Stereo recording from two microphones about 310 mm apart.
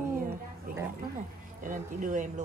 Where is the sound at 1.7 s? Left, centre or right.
Right.